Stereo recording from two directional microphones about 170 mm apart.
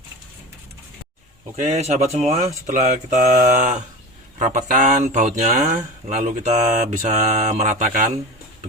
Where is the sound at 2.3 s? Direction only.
45° right (ahead or behind).